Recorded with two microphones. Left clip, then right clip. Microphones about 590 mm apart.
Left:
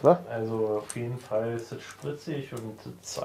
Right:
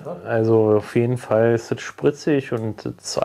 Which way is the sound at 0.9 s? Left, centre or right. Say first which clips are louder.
Right 12 dB; right.